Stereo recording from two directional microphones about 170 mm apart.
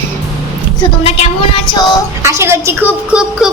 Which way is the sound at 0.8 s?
35° left (ahead or behind).